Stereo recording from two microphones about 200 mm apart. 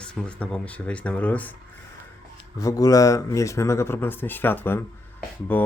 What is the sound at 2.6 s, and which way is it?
Speech, 15° left (ahead or behind).